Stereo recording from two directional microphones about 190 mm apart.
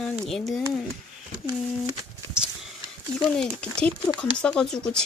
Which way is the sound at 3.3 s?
5° left (ahead or behind).